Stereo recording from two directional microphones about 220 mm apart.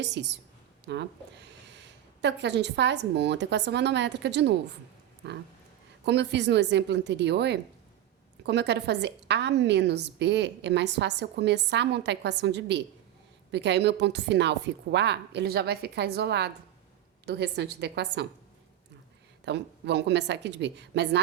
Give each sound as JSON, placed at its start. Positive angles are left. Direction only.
{"t": 0.0, "sound": "a woman's voice", "side_deg": -50}
{"t": 19.5, "sound": "a woman's voice", "side_deg": -50}